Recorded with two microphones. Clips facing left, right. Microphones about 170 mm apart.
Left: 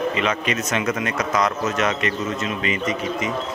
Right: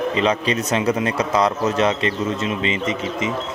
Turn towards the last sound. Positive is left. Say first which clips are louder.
# right 1 dB
turn(degrees=-25)  # may be behind; listen again after turning